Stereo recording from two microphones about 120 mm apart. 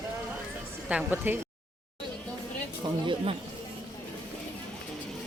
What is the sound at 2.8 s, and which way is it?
Speech, 40° right (ahead or behind).